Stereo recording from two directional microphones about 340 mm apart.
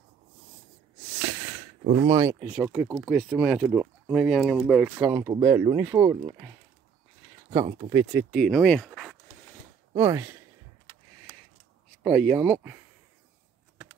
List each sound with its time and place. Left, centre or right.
2.0 s speech: centre
7.5 s speech: centre
12.0 s speech: centre